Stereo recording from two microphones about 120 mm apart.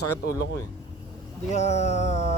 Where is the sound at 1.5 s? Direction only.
70° left (ahead or behind).